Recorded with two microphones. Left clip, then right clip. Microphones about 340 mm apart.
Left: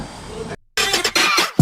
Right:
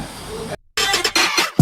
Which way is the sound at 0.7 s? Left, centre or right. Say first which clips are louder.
Even; centre.